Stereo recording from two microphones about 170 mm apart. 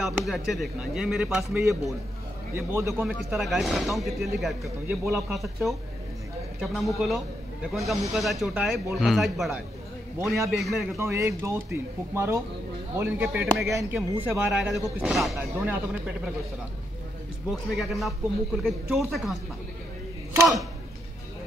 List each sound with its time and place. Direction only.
0.0 s speech: centre (ahead or behind)
1.4 s speech: 15° right (ahead or behind)
3.3 s speech: centre (ahead or behind)
10.1 s speech: 15° right (ahead or behind)
10.5 s speech: centre (ahead or behind)
11.0 s speech: 15° right (ahead or behind)
17.5 s speech: centre (ahead or behind)